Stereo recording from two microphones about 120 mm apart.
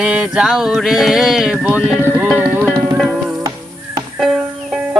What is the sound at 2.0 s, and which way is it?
Music, 15° right (ahead or behind).